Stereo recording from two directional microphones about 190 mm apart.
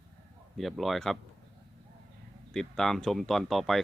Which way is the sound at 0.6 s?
Centre (ahead or behind).